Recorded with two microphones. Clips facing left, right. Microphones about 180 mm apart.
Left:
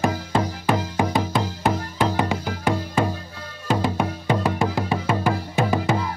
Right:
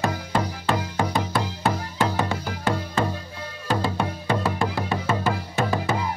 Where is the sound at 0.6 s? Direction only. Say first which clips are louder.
Left 3 dB; 15° left (ahead or behind).